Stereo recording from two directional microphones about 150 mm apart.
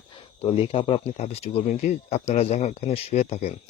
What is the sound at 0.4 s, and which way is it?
Speech, 40° left (ahead or behind).